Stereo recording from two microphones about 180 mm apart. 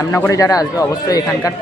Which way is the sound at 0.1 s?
15° left (ahead or behind).